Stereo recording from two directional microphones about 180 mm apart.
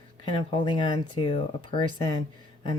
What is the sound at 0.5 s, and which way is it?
Speech, 25° left (ahead or behind).